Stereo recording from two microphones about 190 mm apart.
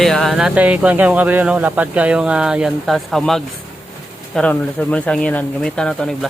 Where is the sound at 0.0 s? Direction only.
Centre (ahead or behind).